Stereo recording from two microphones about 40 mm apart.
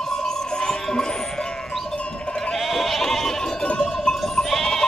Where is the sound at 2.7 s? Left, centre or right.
Centre.